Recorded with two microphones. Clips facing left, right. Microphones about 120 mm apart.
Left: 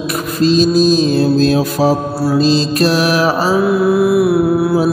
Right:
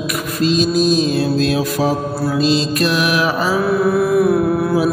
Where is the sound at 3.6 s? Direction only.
15° left (ahead or behind).